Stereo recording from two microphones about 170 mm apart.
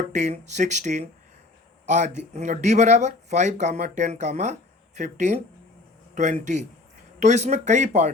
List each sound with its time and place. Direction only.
0.1 s speech: 45° right (ahead or behind)